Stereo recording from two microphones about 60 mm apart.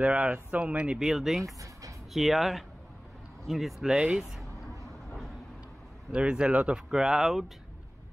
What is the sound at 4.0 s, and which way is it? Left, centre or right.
Speech, centre.